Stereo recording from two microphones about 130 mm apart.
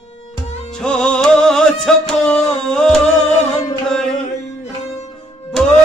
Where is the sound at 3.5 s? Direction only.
30° left (ahead or behind).